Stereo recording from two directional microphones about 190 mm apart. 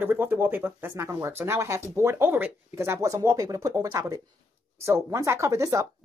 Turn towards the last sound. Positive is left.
turn(degrees=-15)  # may be behind; listen again after turning